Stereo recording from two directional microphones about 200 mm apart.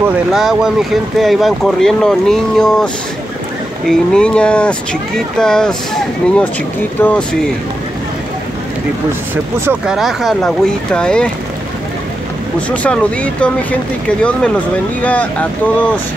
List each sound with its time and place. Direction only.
0.0 s speech: centre (ahead or behind)
9.3 s speech: 5° right (ahead or behind)
12.5 s speech: 5° left (ahead or behind)